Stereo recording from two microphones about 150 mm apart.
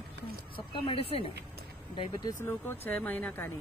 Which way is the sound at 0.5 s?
35° left (ahead or behind).